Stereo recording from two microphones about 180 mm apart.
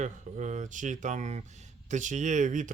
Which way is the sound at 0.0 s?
40° right (ahead or behind).